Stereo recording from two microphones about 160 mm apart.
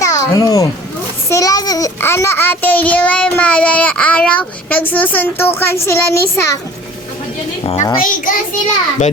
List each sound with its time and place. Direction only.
0.0 s a sound: 20° left (ahead or behind)
1.3 s a child's voice: 20° left (ahead or behind)
7.6 s a woman's voice: 35° left (ahead or behind)
8.0 s a child's voice: 55° left (ahead or behind)